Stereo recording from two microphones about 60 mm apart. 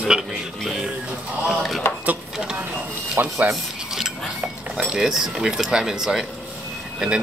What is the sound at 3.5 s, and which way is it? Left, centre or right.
Stir, centre.